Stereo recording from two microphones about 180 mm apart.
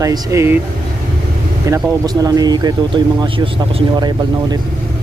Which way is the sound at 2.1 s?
20° right (ahead or behind).